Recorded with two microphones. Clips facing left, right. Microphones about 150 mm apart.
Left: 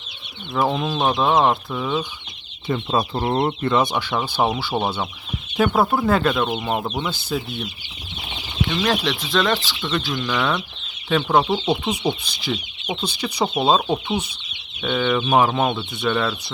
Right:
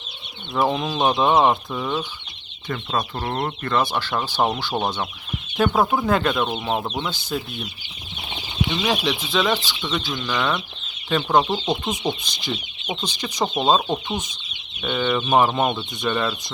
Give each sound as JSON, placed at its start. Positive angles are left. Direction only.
{"t": 0.5, "sound": "speech", "side_deg": 0}
{"t": 2.6, "sound": "speech", "side_deg": 25}
{"t": 4.1, "sound": "speech", "side_deg": 5}
{"t": 8.6, "sound": "speech", "side_deg": -10}
{"t": 14.8, "sound": "speech", "side_deg": 0}